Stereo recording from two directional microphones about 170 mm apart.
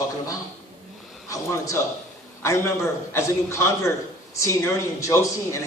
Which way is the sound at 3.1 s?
15° left (ahead or behind).